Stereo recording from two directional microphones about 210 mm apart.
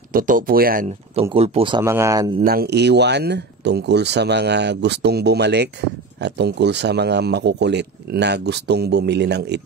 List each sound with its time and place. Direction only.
0.1 s speech: 40° right (ahead or behind)
1.3 s speech: 30° right (ahead or behind)
1.8 s speech: 15° right (ahead or behind)
2.4 s speech: 50° right (ahead or behind)